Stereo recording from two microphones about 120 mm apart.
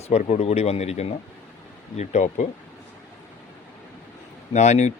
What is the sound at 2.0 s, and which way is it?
Speech, 80° left.